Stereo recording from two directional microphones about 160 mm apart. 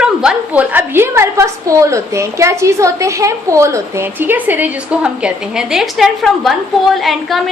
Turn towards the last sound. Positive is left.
turn(degrees=0)  # may be behind; listen again after turning